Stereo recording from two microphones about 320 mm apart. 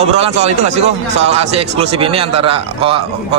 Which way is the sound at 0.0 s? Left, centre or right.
Centre.